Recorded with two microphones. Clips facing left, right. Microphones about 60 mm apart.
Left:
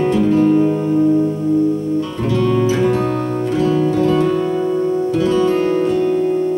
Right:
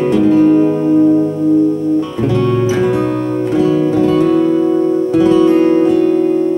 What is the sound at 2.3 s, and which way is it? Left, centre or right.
Music, centre.